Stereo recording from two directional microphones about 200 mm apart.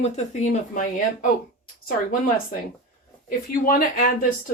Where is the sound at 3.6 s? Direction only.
45° left (ahead or behind).